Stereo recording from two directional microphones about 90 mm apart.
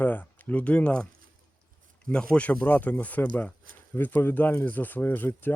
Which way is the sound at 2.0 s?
10° left (ahead or behind).